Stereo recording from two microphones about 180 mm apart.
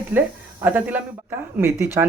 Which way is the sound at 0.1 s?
10° right (ahead or behind).